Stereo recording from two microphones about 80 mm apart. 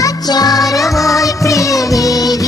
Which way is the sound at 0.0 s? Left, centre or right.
Left.